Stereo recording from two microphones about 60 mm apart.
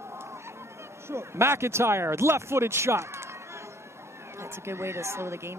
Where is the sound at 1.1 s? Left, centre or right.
Right.